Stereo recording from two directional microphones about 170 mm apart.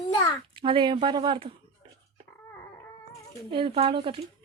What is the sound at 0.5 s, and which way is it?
Speech, 30° right (ahead or behind).